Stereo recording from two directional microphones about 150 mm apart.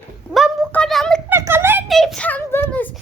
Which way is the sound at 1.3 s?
15° right (ahead or behind).